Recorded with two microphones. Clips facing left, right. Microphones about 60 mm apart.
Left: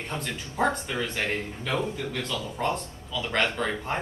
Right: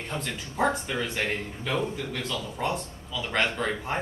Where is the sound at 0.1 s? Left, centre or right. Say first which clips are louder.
Right 1 dB; centre.